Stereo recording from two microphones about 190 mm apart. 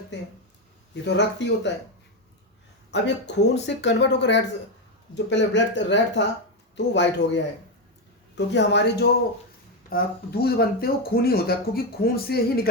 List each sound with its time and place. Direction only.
0.1 s speech: 70° left (ahead or behind)
2.9 s speech: 65° left (ahead or behind)